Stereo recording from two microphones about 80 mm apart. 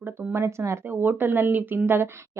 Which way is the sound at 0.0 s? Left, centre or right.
Right.